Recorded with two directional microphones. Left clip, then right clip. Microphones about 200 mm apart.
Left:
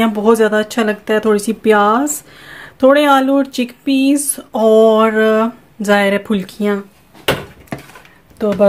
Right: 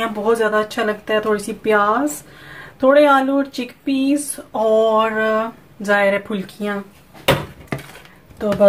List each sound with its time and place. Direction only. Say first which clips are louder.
0.0 s speech: left 5 dB; 50° left (ahead or behind)